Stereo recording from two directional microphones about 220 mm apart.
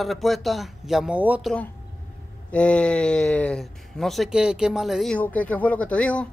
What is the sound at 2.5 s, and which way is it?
Speech, 5° left (ahead or behind).